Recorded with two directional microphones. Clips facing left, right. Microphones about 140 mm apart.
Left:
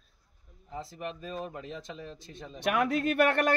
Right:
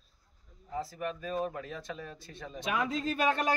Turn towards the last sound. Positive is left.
turn(degrees=65)  # may be behind; listen again after turning